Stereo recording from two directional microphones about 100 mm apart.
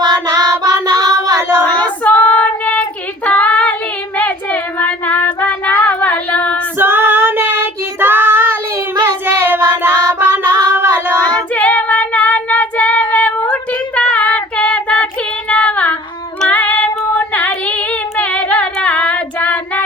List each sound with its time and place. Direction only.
0.6 s child singing: 40° right (ahead or behind)
1.4 s a sound: 25° right (ahead or behind)
1.6 s child singing: 10° left (ahead or behind)
3.2 s female singing: 15° left (ahead or behind)
4.2 s child singing: 15° left (ahead or behind)
6.7 s child singing: 20° right (ahead or behind)
11.3 s child singing: 15° left (ahead or behind)
15.4 s female singing: 15° left (ahead or behind)